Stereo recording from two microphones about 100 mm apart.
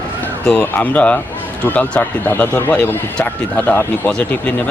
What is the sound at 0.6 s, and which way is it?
Speech, 15° left (ahead or behind).